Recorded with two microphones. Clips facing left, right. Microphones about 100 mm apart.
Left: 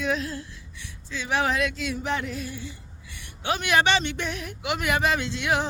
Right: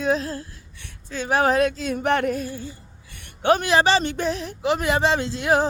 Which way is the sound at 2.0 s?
55° right (ahead or behind).